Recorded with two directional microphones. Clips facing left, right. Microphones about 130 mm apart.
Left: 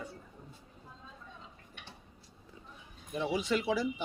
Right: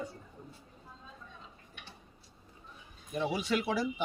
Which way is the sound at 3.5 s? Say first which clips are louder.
Left 1 dB; 55° right (ahead or behind).